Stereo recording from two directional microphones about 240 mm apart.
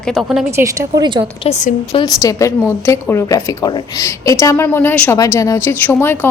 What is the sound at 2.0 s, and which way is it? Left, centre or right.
A woman's voice, centre.